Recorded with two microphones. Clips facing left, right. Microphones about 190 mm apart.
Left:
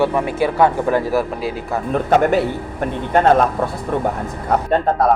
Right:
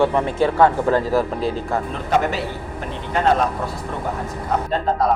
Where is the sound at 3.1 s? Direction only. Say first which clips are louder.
Left 5 dB; 50° left (ahead or behind).